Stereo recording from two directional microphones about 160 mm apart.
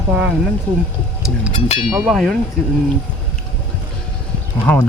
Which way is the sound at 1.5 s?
40° left (ahead or behind).